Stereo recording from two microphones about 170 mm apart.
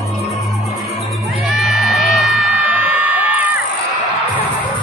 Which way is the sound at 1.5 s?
Centre (ahead or behind).